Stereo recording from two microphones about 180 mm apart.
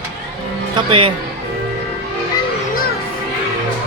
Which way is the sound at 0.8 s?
30° right (ahead or behind).